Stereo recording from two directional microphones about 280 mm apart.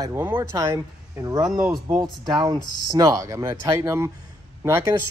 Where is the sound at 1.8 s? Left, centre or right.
Centre.